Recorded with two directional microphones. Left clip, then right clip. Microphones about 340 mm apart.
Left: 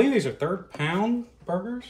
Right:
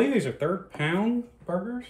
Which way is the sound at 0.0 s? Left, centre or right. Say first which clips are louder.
Left 2 dB; centre.